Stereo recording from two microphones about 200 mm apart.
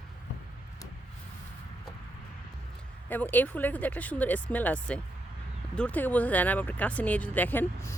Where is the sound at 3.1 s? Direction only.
10° left (ahead or behind).